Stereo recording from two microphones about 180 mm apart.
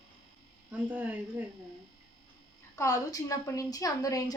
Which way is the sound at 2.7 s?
20° left (ahead or behind).